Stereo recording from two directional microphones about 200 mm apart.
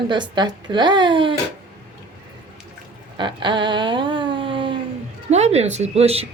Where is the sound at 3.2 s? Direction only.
25° right (ahead or behind).